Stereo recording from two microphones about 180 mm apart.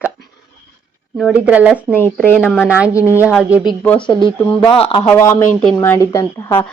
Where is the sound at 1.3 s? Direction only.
10° right (ahead or behind).